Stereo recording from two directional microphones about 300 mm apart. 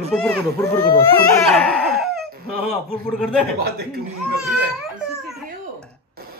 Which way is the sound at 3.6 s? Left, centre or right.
Right.